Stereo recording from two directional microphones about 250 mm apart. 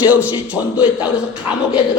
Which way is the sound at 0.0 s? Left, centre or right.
Centre.